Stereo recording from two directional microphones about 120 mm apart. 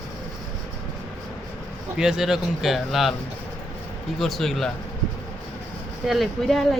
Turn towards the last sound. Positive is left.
turn(degrees=0)  # may be behind; listen again after turning